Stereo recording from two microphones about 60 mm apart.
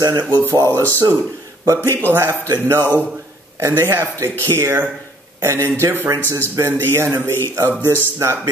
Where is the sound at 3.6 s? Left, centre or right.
Right.